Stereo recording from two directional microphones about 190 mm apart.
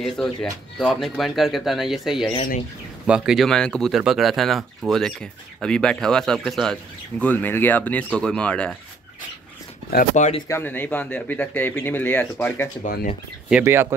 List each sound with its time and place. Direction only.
0.0 s speech: centre (ahead or behind)
9.9 s speech: 40° left (ahead or behind)
10.5 s speech: 10° left (ahead or behind)
12.8 s speech: 45° left (ahead or behind)
13.5 s speech: 10° right (ahead or behind)